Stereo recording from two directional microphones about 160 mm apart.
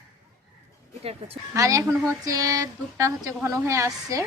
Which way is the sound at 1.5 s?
20° right (ahead or behind).